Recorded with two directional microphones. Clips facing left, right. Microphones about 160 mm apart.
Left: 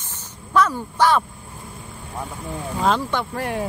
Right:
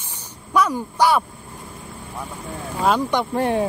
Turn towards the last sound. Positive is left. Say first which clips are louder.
# right 5 dB
turn(degrees=-25)  # may be behind; listen again after turning